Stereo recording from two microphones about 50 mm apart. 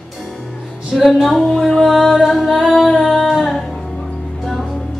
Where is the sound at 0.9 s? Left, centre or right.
Centre.